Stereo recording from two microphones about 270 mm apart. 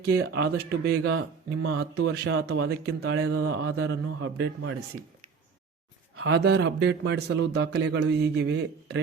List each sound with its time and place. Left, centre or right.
0.1 s a man's voice: right
0.9 s a man's voice: right
3.0 s a man's voice: right
6.1 s a man's voice: right